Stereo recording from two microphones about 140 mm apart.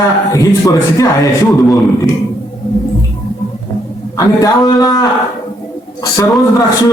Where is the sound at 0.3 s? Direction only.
25° left (ahead or behind).